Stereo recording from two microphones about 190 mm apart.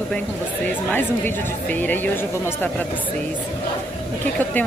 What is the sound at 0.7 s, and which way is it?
Speech, 10° left (ahead or behind).